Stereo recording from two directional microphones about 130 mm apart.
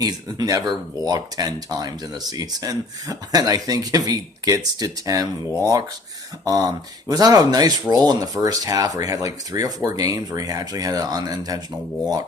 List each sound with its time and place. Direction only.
0.0 s speech: 30° right (ahead or behind)
6.4 s speech: 25° right (ahead or behind)